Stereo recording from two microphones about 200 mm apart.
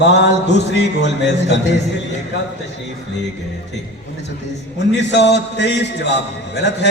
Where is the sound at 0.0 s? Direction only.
60° left (ahead or behind).